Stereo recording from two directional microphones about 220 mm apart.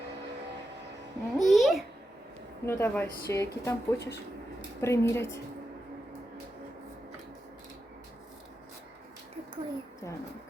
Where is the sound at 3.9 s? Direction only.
50° left (ahead or behind).